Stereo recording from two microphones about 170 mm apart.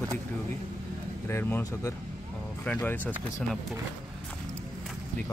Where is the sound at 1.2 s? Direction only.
10° left (ahead or behind).